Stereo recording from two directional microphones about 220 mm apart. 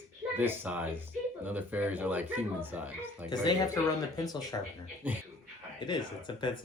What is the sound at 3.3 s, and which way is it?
Speech, 20° left (ahead or behind).